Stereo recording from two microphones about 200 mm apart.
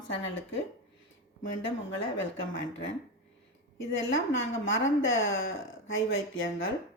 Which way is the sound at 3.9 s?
70° left (ahead or behind).